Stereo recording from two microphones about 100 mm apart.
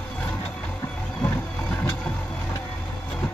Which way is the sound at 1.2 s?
15° left (ahead or behind).